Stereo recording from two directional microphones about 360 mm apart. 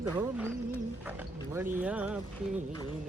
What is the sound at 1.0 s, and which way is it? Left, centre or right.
Speech, centre.